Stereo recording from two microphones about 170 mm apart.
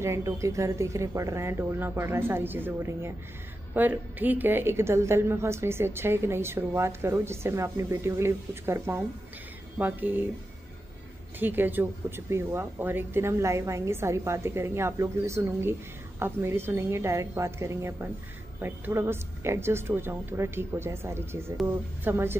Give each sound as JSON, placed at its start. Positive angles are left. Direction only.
{"t": 0.0, "sound": "a woman's voice", "side_deg": -15}
{"t": 11.3, "sound": "a woman's voice", "side_deg": -10}